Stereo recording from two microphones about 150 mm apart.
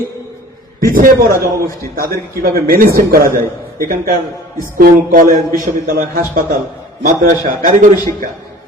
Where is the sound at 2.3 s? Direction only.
75° right (ahead or behind).